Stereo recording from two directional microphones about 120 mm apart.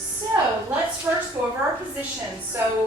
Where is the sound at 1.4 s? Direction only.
25° right (ahead or behind).